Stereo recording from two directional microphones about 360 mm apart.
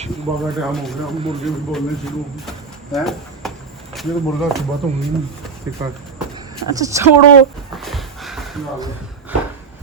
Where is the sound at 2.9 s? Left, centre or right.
Centre.